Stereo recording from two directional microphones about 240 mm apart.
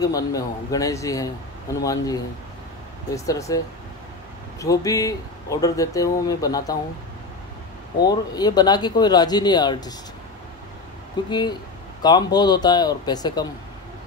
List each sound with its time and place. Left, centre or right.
0.0 s speech: centre
3.3 s speech: centre
8.0 s speech: centre
11.2 s speech: centre